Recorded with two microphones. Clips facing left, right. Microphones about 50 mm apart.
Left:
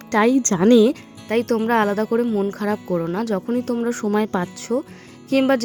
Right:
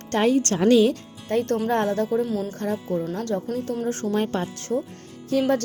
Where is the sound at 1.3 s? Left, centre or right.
Left.